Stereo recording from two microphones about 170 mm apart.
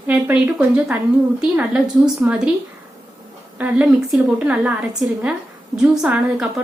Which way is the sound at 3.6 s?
10° right (ahead or behind).